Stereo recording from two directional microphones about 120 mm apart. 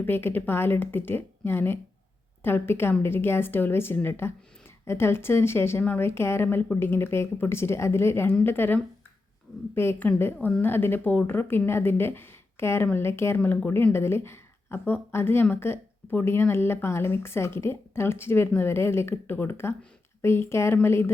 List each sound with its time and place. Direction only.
0.0 s a woman's voice: 20° left (ahead or behind)